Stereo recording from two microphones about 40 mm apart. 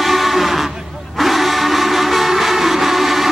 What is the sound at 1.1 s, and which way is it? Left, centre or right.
Music, centre.